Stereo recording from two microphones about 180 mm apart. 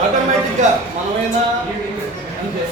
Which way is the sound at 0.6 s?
45° right (ahead or behind).